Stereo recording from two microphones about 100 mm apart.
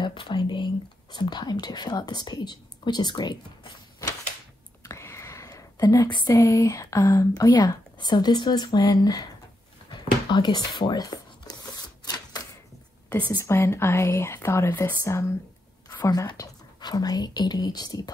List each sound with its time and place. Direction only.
0.0 s speech: 55° left (ahead or behind)
4.8 s whispering: 30° left (ahead or behind)
6.0 s speech: 50° left (ahead or behind)
6.3 s speech: 30° left (ahead or behind)
9.8 s a sound: 45° left (ahead or behind)
13.4 s speech: 25° left (ahead or behind)